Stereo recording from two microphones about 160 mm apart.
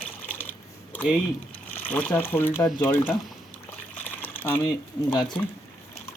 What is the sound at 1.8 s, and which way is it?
Speech, 10° left (ahead or behind).